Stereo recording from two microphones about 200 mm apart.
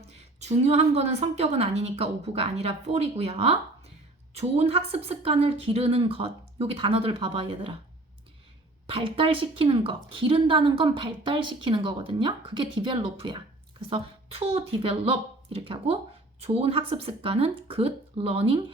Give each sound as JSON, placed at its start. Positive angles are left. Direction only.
{"t": 0.3, "sound": "a woman's voice", "side_deg": -35}
{"t": 8.9, "sound": "a woman's voice", "side_deg": -25}